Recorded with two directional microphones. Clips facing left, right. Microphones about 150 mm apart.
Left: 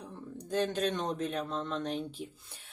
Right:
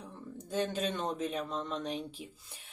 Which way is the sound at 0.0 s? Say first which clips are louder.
Left 2 dB; 5° right (ahead or behind).